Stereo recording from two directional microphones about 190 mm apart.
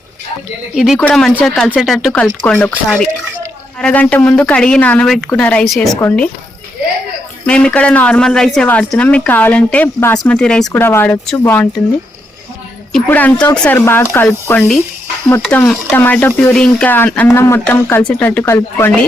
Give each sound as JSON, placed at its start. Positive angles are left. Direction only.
{"t": 0.9, "sound": "speech", "side_deg": 5}
{"t": 7.4, "sound": "speech", "side_deg": 5}
{"t": 12.9, "sound": "speech", "side_deg": 10}